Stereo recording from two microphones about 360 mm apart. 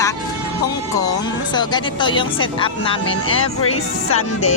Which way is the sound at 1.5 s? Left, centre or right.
Centre.